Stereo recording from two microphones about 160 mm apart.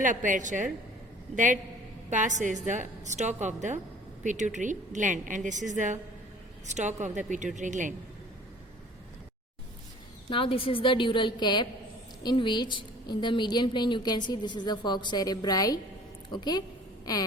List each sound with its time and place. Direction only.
0.0 s a woman's voice: 55° right (ahead or behind)
2.0 s a woman's voice: 50° right (ahead or behind)
10.2 s a woman's voice: 35° left (ahead or behind)